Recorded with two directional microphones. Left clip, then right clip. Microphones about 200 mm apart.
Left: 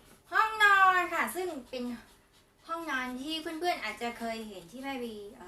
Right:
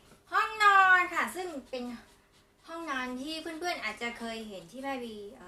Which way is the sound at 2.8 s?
Centre (ahead or behind).